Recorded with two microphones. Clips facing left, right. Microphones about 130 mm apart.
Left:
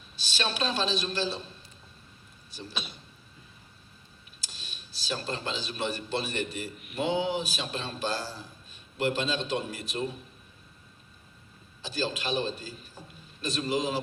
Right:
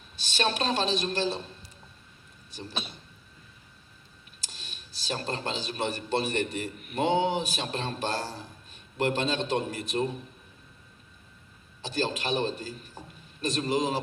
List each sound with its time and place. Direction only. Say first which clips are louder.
0.2 s a woman's voice: right 3 dB; 55° right (ahead or behind)
2.5 s speech: right 2 dB; 55° right (ahead or behind)
4.4 s speech: right 1 dB; 55° right (ahead or behind)
11.8 s a man's voice: right 2 dB; 55° right (ahead or behind)